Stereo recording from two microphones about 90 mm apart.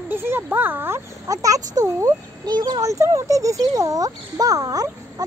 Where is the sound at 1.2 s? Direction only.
40° right (ahead or behind).